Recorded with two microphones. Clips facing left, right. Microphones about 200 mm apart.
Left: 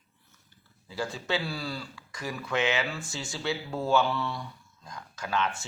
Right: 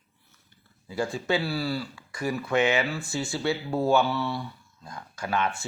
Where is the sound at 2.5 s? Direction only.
50° right (ahead or behind).